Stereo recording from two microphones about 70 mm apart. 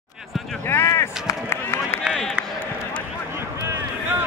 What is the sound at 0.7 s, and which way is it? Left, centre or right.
Run, left.